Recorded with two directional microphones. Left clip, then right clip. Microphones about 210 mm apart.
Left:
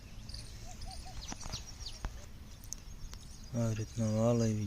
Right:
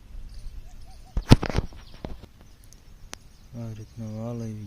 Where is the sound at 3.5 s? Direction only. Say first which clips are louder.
Left 4 dB; centre (ahead or behind).